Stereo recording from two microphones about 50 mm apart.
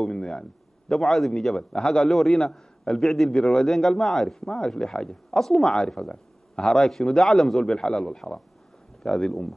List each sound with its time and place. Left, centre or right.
0.0 s a man's voice: centre
3.3 s speech: centre
3.6 s speech: centre